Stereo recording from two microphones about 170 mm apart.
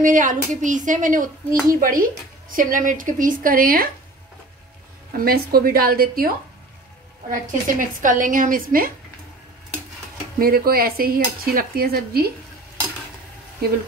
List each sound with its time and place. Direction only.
0.0 s speech: 50° right (ahead or behind)
5.1 s cutlery: 60° right (ahead or behind)
7.2 s speech: 50° right (ahead or behind)
10.4 s cutlery: 60° right (ahead or behind)